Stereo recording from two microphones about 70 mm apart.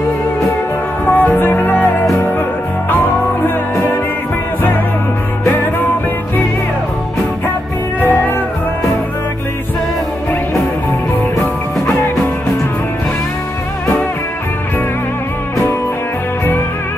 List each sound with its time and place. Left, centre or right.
1.0 s music: left
3.4 s music: left
5.5 s music: left
8.0 s music: left